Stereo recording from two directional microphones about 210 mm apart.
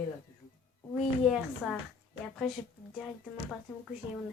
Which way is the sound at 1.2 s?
Centre (ahead or behind).